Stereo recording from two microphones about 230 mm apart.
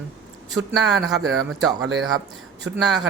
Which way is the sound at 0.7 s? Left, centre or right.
Centre.